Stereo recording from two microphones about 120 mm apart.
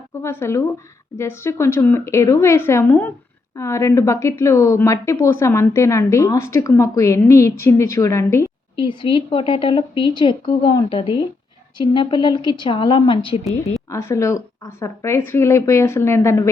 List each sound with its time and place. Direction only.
0.2 s speech: 20° left (ahead or behind)
8.7 s a woman's voice: 45° left (ahead or behind)
13.9 s speech: 25° left (ahead or behind)